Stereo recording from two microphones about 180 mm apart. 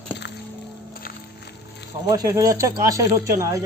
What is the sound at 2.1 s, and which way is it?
Speech, 20° right (ahead or behind).